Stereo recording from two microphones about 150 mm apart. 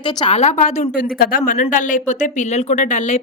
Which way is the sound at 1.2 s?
70° left (ahead or behind).